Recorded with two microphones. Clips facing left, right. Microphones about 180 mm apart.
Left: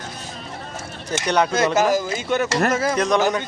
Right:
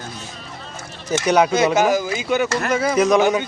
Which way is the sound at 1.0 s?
5° right (ahead or behind).